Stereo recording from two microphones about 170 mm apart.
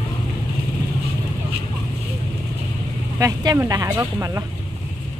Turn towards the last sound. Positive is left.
turn(degrees=-20)  # may be behind; listen again after turning